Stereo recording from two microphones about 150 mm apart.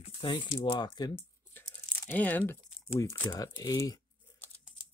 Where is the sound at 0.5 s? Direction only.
30° left (ahead or behind).